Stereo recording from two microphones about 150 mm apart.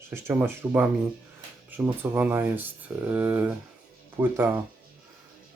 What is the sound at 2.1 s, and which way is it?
Speech, 15° right (ahead or behind).